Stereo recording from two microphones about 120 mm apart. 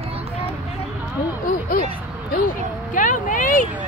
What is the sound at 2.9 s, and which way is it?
Speech, 90° left.